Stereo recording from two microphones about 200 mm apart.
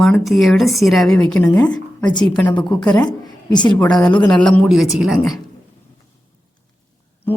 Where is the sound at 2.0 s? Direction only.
20° left (ahead or behind).